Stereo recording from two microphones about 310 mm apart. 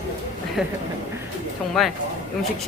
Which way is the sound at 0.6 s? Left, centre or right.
Centre.